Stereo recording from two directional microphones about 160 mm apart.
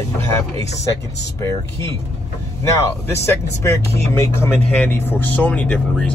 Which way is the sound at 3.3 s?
15° left (ahead or behind).